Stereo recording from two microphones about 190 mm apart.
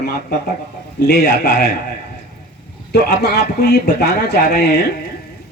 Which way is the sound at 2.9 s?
60° left (ahead or behind).